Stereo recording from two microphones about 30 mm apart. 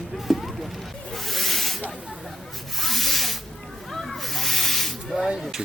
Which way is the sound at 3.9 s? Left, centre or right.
Centre.